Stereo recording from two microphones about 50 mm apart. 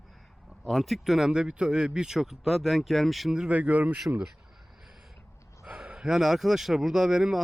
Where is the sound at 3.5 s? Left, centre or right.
Right.